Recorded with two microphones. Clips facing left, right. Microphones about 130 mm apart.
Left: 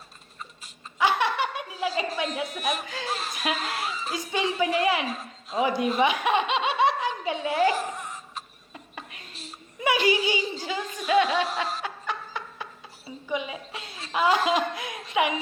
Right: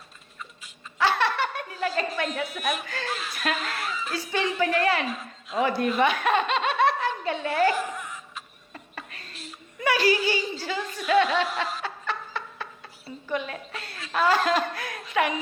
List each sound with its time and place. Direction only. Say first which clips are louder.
0.9 s laughter: even; 15° left (ahead or behind)
2.1 s a woman's voice: even; 10° left (ahead or behind)
3.1 s speech: left 3 dB; 40° left (ahead or behind)
3.3 s a woman's voice: even; 10° left (ahead or behind)
6.0 s snicker: right 1 dB; 10° left (ahead or behind)
7.8 s a sound: right 1 dB; 40° left (ahead or behind)
8.7 s a sound: right 1 dB; 10° left (ahead or behind)
9.8 s chuckle: even; 20° left (ahead or behind)
11.8 s snicker: even; 10° left (ahead or behind)
13.1 s a sound: even; 10° left (ahead or behind)
14.1 s a woman's voice: even; 15° left (ahead or behind)